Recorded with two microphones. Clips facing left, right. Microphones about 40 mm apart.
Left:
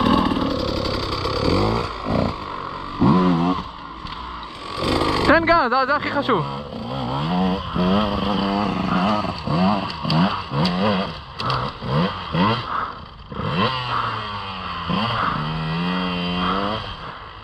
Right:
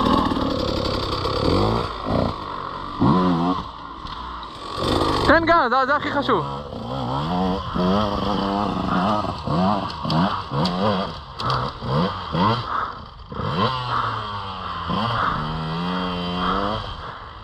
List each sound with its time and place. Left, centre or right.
0.0 s vehicle: left
0.5 s vehicle: centre
3.1 s vehicle: left
4.7 s a sound: left
5.3 s speech: left
6.4 s vehicle: left
8.5 s vehicle: left